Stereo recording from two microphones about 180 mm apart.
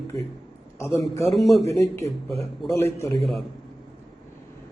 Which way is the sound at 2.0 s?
35° right (ahead or behind).